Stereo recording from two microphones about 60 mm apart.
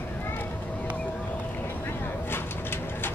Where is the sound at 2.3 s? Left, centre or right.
Left.